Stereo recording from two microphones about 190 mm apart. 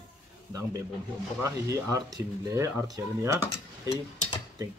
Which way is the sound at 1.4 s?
15° right (ahead or behind).